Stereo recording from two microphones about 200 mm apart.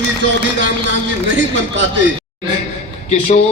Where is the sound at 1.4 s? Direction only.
65° right (ahead or behind).